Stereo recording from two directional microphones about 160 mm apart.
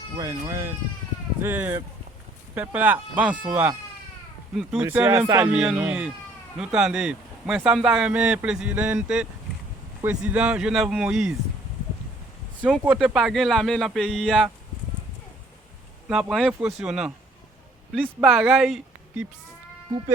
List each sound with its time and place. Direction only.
0.2 s speech: 20° right (ahead or behind)
4.9 s speech: 15° right (ahead or behind)
12.8 s speech: 10° right (ahead or behind)
16.0 s speech: centre (ahead or behind)
18.2 s speech: 5° right (ahead or behind)